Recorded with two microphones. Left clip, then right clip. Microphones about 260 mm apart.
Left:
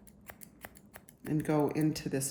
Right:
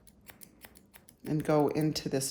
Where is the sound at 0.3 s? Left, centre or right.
Centre.